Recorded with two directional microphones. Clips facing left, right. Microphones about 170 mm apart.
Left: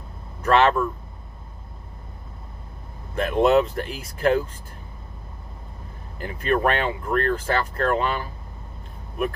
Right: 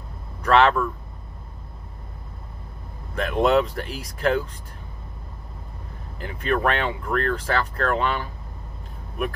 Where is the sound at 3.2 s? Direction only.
5° left (ahead or behind).